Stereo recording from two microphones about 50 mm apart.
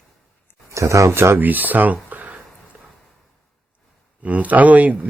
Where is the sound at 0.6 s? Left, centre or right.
Right.